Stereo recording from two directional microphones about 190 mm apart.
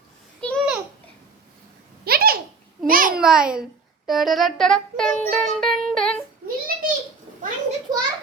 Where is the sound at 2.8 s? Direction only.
50° right (ahead or behind).